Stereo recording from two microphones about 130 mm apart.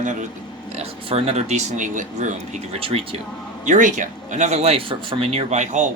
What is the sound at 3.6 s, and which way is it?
Speech, 75° right (ahead or behind).